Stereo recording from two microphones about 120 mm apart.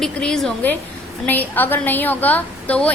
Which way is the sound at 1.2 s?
15° left (ahead or behind).